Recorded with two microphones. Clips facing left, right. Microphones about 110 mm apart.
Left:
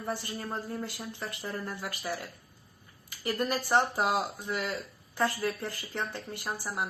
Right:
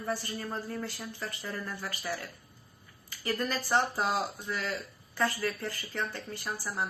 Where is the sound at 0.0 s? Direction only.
25° left (ahead or behind).